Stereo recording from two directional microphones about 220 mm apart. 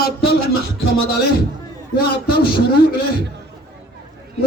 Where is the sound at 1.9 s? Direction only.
45° left (ahead or behind).